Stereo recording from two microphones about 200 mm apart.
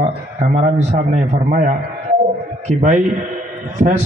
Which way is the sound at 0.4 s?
30° right (ahead or behind).